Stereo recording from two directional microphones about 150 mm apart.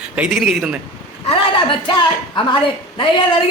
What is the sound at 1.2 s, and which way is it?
Speech, 35° left (ahead or behind).